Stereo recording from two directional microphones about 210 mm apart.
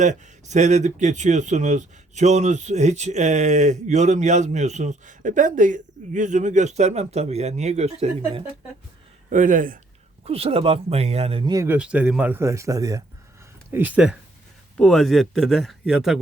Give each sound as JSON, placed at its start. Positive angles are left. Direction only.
{"t": 0.0, "sound": "speech", "side_deg": -35}
{"t": 10.2, "sound": "speech", "side_deg": -30}